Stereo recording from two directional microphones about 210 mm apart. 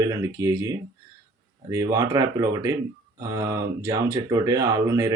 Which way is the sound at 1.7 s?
15° right (ahead or behind).